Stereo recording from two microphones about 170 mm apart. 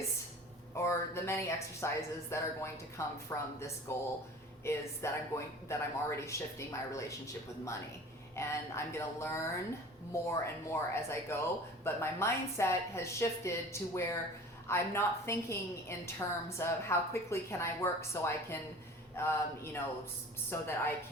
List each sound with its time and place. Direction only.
0.7 s a woman's voice: 15° left (ahead or behind)
8.4 s a woman's voice: 15° left (ahead or behind)